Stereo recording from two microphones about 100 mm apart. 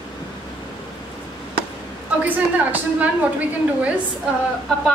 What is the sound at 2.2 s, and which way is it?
A woman's voice, 15° right (ahead or behind).